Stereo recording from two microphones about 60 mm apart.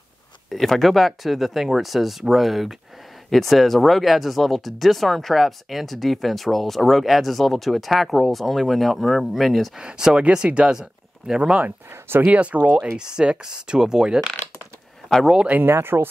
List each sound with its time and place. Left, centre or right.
0.5 s speech: centre
9.8 s speech: centre
11.9 s speech: right
12.3 s speech: right
15.3 s speech: right
15.6 s speech: right